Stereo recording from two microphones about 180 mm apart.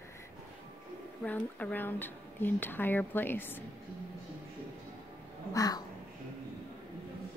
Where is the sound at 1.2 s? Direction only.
5° left (ahead or behind).